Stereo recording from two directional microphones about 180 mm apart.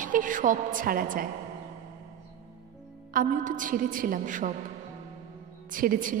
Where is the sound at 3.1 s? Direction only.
50° right (ahead or behind).